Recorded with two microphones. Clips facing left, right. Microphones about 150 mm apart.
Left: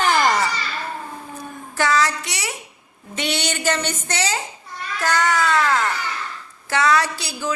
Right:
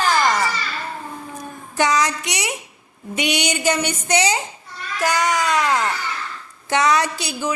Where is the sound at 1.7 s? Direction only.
20° right (ahead or behind).